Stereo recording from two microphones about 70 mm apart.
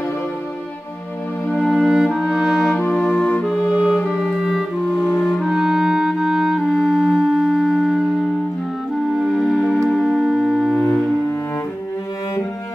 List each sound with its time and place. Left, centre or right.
1.6 s music: centre
2.7 s music: centre
3.9 s music: centre
5.4 s clarinet: centre
9.3 s music: centre